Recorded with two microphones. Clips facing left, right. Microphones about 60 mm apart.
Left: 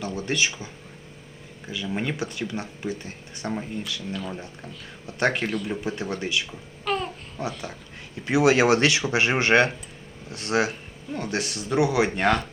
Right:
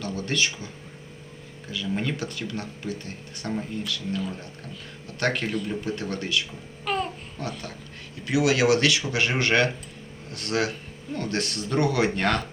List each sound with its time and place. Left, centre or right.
0.0 s speech: centre
1.7 s speech: centre
5.2 s speech: centre
6.8 s babbling: centre
7.4 s speech: centre
8.2 s speech: left; by 12.5 s centre